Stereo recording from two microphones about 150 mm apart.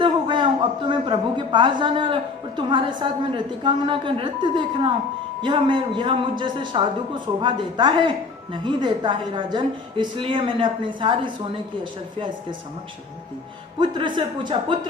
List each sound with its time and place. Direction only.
0.0 s a sound: 35° right (ahead or behind)
0.9 s a woman's voice: 35° right (ahead or behind)
13.7 s a woman's voice: 35° right (ahead or behind)